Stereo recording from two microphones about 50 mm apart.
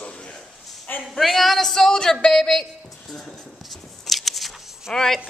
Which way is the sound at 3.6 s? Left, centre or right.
Centre.